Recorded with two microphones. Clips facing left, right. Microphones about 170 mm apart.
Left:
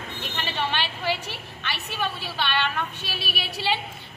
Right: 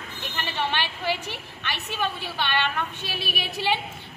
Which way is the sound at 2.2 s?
15° right (ahead or behind).